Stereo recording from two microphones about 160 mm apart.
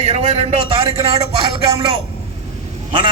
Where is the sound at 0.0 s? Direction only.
40° right (ahead or behind).